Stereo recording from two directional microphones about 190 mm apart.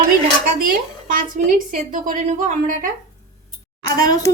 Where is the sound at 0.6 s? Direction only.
45° right (ahead or behind).